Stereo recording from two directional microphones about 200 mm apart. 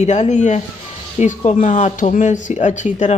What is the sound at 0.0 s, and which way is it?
Speech, 35° left (ahead or behind).